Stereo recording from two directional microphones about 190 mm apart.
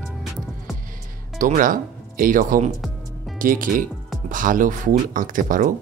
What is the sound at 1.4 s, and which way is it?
Speech, 45° right (ahead or behind).